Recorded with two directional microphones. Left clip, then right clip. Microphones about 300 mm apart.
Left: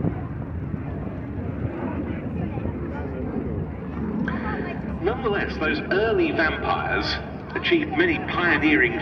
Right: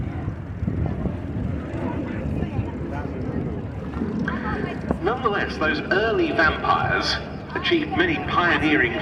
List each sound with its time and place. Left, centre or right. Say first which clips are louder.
5.0 s a man's voice: right 1 dB; right